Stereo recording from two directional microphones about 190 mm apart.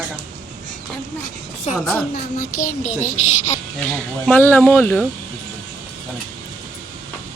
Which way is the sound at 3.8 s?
10° left (ahead or behind).